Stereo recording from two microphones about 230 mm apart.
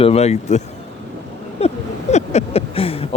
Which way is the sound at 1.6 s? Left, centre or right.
Left.